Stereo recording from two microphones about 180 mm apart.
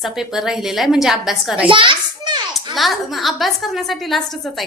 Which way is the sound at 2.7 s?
Centre (ahead or behind).